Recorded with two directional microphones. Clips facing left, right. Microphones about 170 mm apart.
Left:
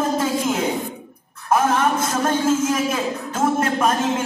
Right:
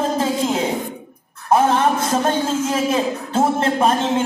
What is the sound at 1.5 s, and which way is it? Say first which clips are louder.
Speech: right 3 dB; 30° right (ahead or behind).